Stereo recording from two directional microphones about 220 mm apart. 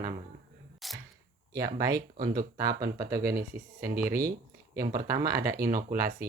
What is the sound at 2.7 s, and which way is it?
Speech, 45° right (ahead or behind).